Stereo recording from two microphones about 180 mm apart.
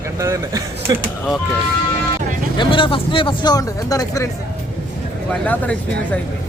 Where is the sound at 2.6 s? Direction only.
30° left (ahead or behind).